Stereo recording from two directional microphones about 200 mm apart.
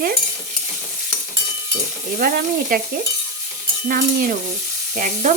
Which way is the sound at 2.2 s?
45° right (ahead or behind).